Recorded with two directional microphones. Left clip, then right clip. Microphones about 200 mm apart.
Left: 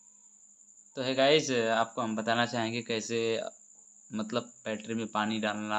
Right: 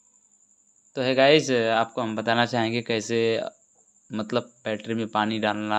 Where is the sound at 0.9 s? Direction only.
40° right (ahead or behind).